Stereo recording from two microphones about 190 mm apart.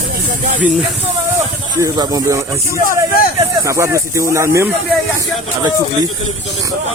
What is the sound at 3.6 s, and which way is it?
Speech, 15° right (ahead or behind).